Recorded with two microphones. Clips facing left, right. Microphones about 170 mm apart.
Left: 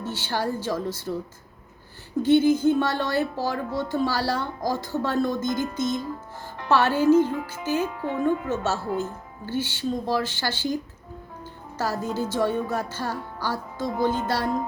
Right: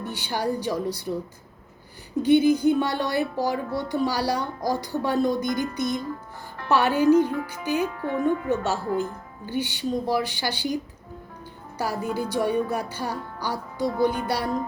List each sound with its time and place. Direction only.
0.0 s speech: 15° right (ahead or behind)
2.2 s speech: 15° right (ahead or behind)
7.9 s speech: 15° left (ahead or behind)
9.0 s speech: 15° right (ahead or behind)
11.8 s speech: 15° right (ahead or behind)